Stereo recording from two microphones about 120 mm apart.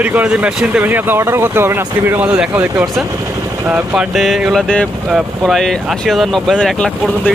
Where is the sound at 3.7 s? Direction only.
15° right (ahead or behind).